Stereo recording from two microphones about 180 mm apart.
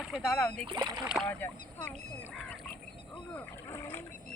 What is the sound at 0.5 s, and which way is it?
Speech, 30° right (ahead or behind).